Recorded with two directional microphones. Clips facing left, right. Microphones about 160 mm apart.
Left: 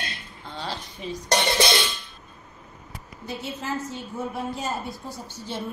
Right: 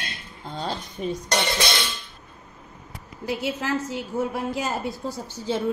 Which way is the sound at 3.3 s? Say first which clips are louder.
Right 5 dB; 90° right.